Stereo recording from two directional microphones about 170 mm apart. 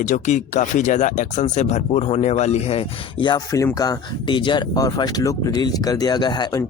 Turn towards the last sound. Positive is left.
turn(degrees=25)  # may be behind; listen again after turning